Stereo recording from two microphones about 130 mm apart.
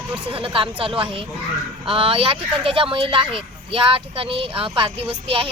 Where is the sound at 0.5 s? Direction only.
45° right (ahead or behind).